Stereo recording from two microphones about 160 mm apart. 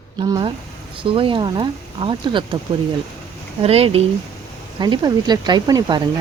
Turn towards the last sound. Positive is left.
turn(degrees=-25)  # may be behind; listen again after turning